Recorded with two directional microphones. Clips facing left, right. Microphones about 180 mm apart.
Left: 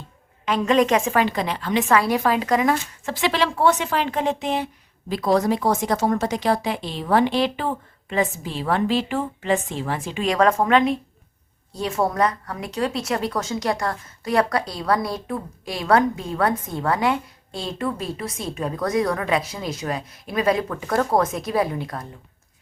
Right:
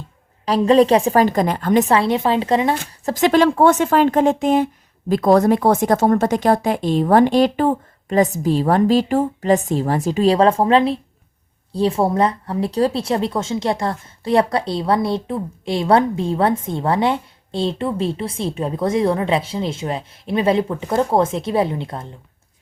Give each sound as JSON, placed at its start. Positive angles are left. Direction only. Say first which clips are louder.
{"t": 0.4, "sound": "a woman's voice", "louder": "right 6 dB", "side_deg": -35}
{"t": 1.9, "sound": "speech", "louder": "right 3 dB", "side_deg": -25}
{"t": 3.1, "sound": "a woman's voice", "louder": "right 8 dB", "side_deg": -45}